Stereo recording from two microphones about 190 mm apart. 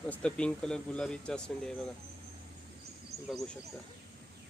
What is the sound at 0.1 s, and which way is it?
Speech, 5° left (ahead or behind).